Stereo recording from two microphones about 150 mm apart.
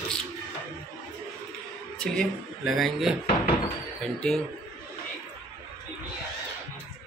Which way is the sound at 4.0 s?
5° left (ahead or behind).